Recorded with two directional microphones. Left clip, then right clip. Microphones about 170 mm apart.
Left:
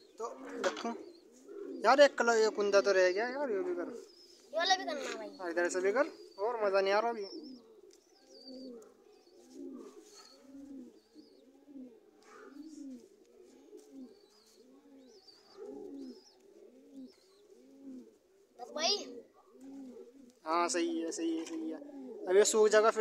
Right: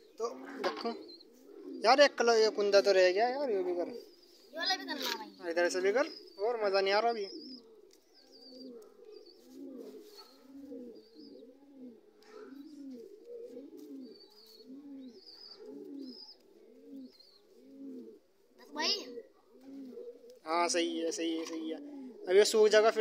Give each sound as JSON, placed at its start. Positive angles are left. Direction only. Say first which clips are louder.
{"t": 0.2, "sound": "a sound", "louder": "even", "side_deg": 10}
{"t": 1.8, "sound": "a man's voice", "louder": "even", "side_deg": 5}
{"t": 4.5, "sound": "speech", "louder": "left 4 dB", "side_deg": 35}
{"t": 5.4, "sound": "a man's voice", "louder": "right 2 dB", "side_deg": 5}
{"t": 20.2, "sound": "speech", "louder": "right 1 dB", "side_deg": 5}